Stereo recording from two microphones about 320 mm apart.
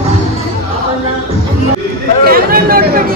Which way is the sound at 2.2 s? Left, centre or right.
Right.